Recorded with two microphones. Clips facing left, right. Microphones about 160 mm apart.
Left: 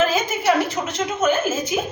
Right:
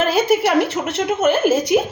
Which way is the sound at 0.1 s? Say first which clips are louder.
Right 4 dB; 65° right (ahead or behind).